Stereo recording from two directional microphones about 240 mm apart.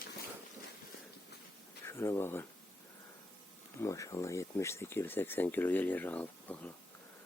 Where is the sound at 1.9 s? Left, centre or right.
Centre.